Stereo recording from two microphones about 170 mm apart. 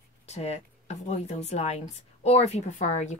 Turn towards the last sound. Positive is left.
turn(degrees=45)  # may be behind; listen again after turning